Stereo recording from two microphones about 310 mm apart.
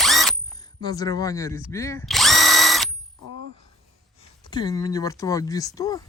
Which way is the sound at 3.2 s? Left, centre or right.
Right.